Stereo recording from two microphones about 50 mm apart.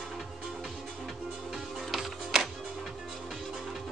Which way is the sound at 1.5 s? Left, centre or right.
Centre.